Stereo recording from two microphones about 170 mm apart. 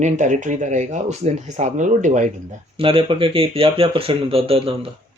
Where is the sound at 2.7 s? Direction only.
30° right (ahead or behind).